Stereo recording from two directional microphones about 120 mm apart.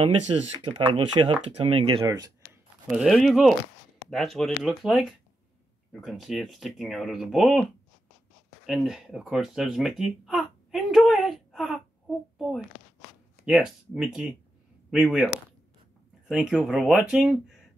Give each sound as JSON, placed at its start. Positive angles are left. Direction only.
{"t": 0.0, "sound": "speech", "side_deg": -45}
{"t": 2.0, "sound": "speech", "side_deg": -30}
{"t": 3.1, "sound": "speech", "side_deg": 0}
{"t": 8.6, "sound": "speech", "side_deg": 0}
{"t": 16.3, "sound": "speech", "side_deg": -5}